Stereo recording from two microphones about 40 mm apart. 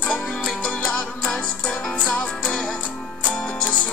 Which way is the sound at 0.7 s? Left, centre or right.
Left.